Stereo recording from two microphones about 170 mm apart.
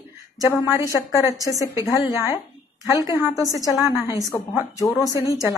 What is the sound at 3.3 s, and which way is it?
Speech, 20° left (ahead or behind).